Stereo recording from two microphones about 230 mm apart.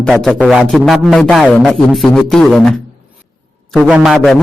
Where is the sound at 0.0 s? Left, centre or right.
Centre.